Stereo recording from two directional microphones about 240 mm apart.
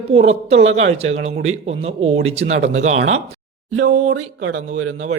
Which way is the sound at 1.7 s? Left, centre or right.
Right.